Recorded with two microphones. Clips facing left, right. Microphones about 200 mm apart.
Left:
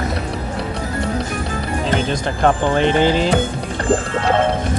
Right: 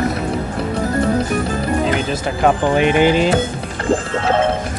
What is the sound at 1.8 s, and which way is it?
Speech, 5° right (ahead or behind).